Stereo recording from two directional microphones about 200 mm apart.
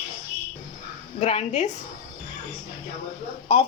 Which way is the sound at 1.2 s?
30° left (ahead or behind).